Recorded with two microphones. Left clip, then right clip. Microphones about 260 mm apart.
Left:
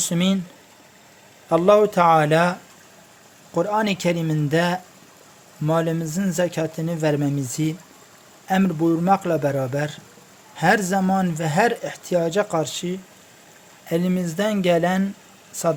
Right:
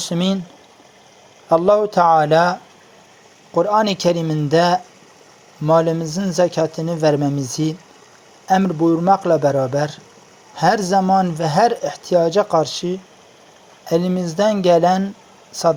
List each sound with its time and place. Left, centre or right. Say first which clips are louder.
0.0 s speech: right 2 dB; centre
1.5 s speech: right 2 dB; centre